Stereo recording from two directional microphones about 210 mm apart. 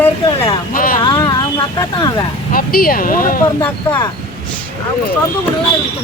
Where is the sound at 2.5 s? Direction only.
45° left (ahead or behind).